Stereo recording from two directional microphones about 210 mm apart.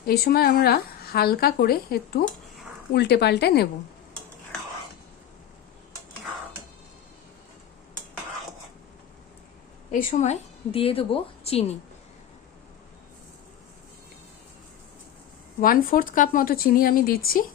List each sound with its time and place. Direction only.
0.0 s speech: 45° left (ahead or behind)
9.9 s a woman's voice: 35° left (ahead or behind)
15.6 s speech: 40° left (ahead or behind)